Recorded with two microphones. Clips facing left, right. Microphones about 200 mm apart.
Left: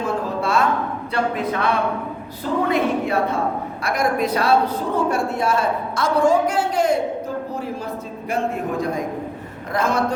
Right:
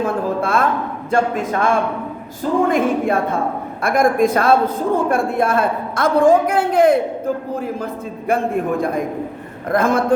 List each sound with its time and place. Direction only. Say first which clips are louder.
0.0 s a sound: right 3 dB; 55° right (ahead or behind)
1.1 s a woman's voice: right 5 dB; 45° right (ahead or behind)
8.3 s a woman's voice: right 5 dB; 55° right (ahead or behind)